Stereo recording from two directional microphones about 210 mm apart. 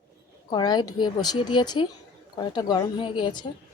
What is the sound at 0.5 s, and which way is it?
Speech, 20° left (ahead or behind).